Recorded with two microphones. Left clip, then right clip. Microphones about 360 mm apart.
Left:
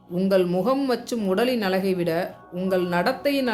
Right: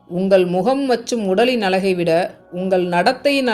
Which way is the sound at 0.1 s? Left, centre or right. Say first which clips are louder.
Right 6 dB; left.